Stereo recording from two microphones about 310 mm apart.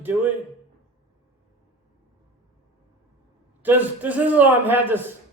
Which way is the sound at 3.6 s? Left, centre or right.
Centre.